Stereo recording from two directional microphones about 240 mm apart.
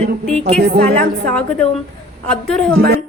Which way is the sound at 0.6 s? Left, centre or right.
Right.